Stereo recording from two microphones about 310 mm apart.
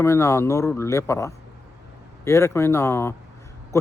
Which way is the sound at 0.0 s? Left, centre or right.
Centre.